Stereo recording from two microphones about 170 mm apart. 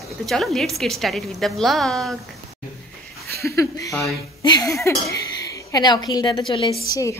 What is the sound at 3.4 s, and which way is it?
A woman's voice, 20° left (ahead or behind).